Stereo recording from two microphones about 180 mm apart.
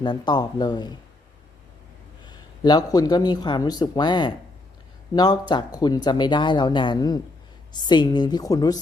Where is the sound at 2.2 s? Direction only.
20° left (ahead or behind).